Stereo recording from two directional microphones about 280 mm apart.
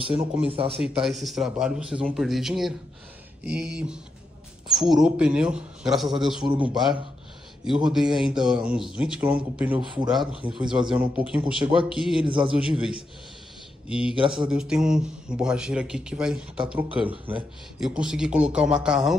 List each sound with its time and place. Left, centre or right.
0.5 s speech: centre
0.7 s speech: centre